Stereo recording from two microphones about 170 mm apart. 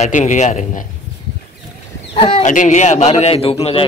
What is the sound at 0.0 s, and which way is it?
Speech, 45° left (ahead or behind).